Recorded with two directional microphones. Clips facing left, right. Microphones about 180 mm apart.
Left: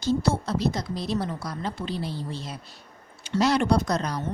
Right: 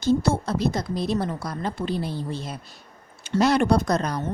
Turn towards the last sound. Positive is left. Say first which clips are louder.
# right 2 dB
turn(degrees=-50)  # may be behind; listen again after turning